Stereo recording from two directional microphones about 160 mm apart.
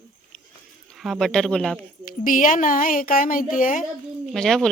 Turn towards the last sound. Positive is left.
turn(degrees=5)  # may be behind; listen again after turning